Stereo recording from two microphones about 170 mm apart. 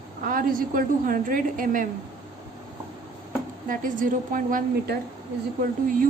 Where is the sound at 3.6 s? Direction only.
50° right (ahead or behind).